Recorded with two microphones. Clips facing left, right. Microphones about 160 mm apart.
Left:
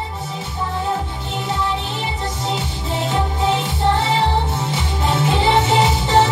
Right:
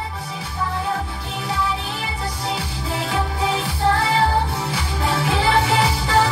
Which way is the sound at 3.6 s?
25° left (ahead or behind).